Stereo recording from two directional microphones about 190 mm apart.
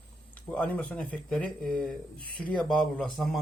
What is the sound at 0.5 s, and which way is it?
Speech, 5° left (ahead or behind).